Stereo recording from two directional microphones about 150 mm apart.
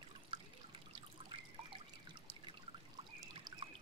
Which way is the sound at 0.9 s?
35° right (ahead or behind).